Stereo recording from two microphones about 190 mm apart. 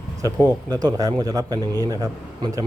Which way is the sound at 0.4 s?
20° right (ahead or behind).